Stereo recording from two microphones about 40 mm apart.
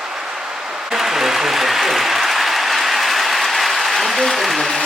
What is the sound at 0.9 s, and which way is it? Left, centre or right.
Applause, centre.